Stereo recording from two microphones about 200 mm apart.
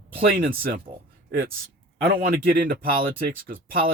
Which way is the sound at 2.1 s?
45° right (ahead or behind).